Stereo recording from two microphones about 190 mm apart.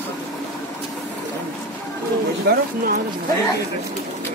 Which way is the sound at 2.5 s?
55° right (ahead or behind).